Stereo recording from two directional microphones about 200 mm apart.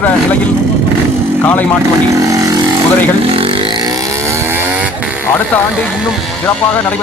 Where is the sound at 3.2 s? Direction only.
30° right (ahead or behind); by 5.0 s 10° right (ahead or behind).